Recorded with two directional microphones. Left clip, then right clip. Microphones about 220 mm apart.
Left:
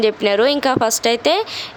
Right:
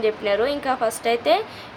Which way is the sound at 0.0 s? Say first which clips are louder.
Left 6 dB; 50° left (ahead or behind).